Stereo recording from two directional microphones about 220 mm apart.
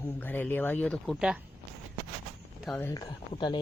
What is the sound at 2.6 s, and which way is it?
Speech, 5° left (ahead or behind).